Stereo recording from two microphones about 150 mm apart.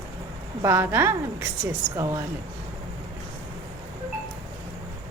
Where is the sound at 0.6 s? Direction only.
15° right (ahead or behind).